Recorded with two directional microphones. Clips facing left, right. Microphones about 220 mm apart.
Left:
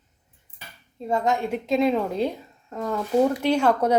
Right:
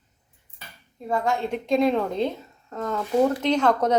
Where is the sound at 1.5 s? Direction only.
5° left (ahead or behind).